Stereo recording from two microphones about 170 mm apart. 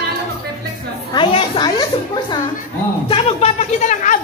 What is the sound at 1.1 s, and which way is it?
A child's voice, 30° left (ahead or behind).